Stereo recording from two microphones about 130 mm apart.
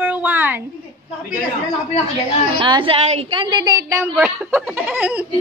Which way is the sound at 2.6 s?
40° right (ahead or behind).